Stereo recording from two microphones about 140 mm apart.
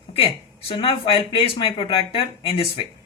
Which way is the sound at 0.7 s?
40° left (ahead or behind).